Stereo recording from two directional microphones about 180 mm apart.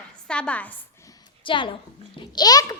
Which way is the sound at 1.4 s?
25° left (ahead or behind).